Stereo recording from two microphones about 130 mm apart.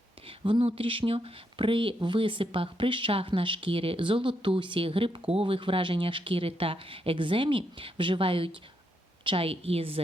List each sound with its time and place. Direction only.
0.3 s speech: 40° right (ahead or behind)